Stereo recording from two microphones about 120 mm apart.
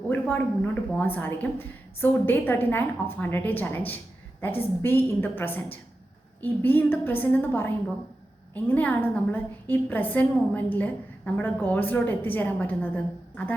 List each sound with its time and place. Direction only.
0.1 s a woman's voice: 15° left (ahead or behind)
8.7 s a woman's voice: 15° left (ahead or behind)